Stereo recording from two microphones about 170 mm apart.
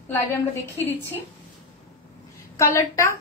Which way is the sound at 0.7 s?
15° left (ahead or behind).